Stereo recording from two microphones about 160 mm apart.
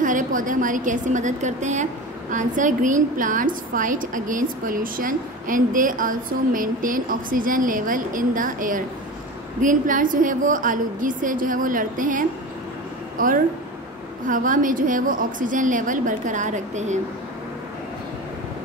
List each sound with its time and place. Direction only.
0.0 s a woman's voice: 55° right (ahead or behind)